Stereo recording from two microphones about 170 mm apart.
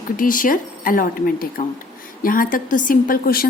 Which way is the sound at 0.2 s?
55° left (ahead or behind).